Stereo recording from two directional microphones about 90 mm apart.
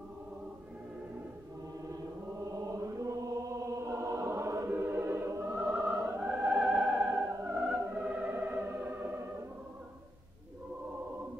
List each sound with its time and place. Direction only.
2.5 s chant: 35° right (ahead or behind)
4.6 s choir: 25° right (ahead or behind)
5.7 s opera: 10° right (ahead or behind)
6.0 s music: 15° right (ahead or behind)